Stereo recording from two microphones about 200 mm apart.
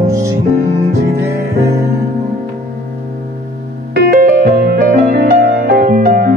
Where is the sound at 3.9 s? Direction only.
50° right (ahead or behind).